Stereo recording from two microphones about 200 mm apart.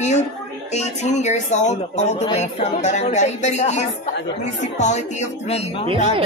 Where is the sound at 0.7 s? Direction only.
35° left (ahead or behind).